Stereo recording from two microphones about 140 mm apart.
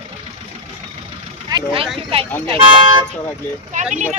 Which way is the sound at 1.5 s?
40° right (ahead or behind).